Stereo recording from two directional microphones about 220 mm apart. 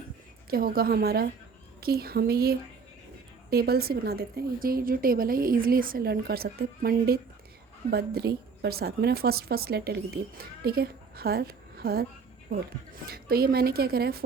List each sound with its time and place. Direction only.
0.5 s a woman's voice: 40° right (ahead or behind)